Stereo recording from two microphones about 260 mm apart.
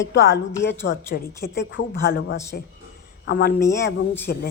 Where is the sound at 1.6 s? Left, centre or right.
Left.